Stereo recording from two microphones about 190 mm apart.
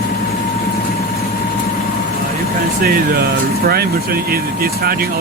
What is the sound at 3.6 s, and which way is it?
Speech, 55° right (ahead or behind).